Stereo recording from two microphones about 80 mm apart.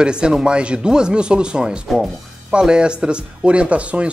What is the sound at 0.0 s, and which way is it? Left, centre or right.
Speech, centre.